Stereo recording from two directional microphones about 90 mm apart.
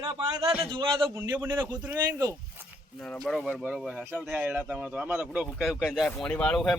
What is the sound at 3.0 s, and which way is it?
Speech, 5° left (ahead or behind).